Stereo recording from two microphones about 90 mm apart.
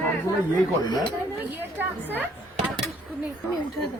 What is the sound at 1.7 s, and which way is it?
Speech, 20° right (ahead or behind).